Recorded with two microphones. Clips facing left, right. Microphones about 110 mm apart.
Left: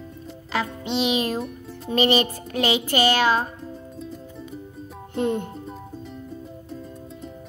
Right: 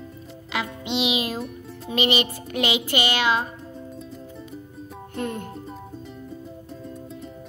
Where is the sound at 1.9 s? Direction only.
40° left (ahead or behind).